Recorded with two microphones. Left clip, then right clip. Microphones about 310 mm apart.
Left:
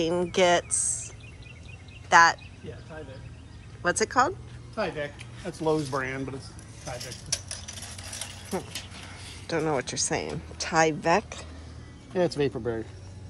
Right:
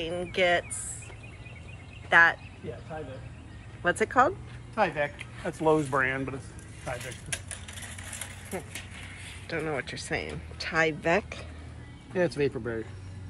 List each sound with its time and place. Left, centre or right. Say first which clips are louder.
0.0 s speech: left 4 dB; centre
2.0 s speech: left 2 dB; centre
3.8 s speech: even; centre
4.7 s speech: right 4 dB; centre
9.5 s speech: left 5 dB; centre
12.1 s speech: left 1 dB; left